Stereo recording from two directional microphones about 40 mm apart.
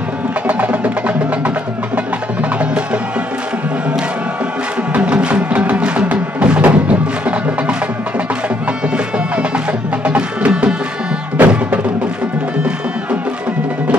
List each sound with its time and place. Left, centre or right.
0.5 s music: right
2.6 s music: right
4.9 s music: right
8.9 s music: right
11.3 s music: right